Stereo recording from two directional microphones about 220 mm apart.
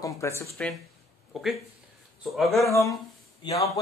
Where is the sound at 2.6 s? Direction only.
15° left (ahead or behind).